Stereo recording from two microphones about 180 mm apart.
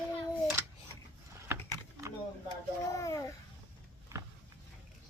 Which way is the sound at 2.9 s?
15° left (ahead or behind).